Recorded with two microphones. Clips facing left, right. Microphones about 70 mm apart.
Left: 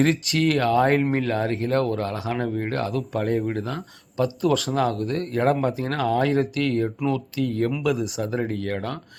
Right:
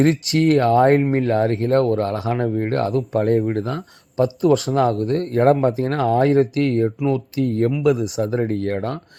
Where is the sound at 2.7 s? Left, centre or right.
Right.